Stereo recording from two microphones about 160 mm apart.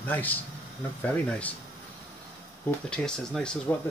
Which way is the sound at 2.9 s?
5° left (ahead or behind).